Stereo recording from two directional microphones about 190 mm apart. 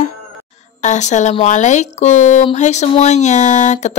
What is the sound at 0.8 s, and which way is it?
Speech, 40° left (ahead or behind).